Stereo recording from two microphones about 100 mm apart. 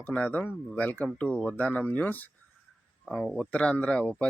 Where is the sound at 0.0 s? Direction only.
15° left (ahead or behind).